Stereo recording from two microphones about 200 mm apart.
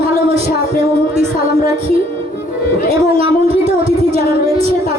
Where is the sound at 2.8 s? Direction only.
30° right (ahead or behind).